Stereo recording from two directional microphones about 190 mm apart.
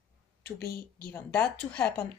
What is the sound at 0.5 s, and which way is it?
Speech, 55° left (ahead or behind).